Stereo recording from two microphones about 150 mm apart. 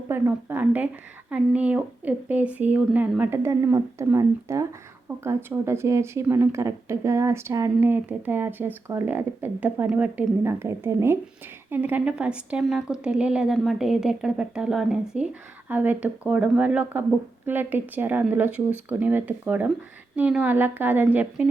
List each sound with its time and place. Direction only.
0.1 s a woman's voice: 15° right (ahead or behind)